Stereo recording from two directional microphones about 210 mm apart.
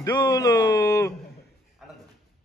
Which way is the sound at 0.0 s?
20° left (ahead or behind).